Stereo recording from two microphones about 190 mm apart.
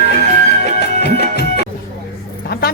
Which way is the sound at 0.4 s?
60° left (ahead or behind).